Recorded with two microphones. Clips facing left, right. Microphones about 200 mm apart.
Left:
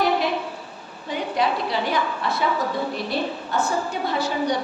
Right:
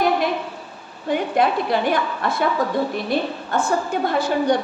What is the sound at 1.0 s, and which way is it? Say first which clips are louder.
A woman's voice: right 5 dB; 55° right (ahead or behind).